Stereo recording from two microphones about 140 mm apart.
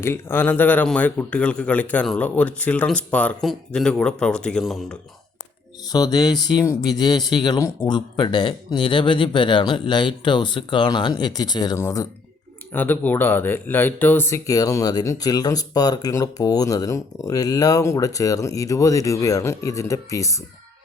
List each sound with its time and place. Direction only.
0.0 s a man's voice: 15° left (ahead or behind)
5.9 s speech: 30° left (ahead or behind)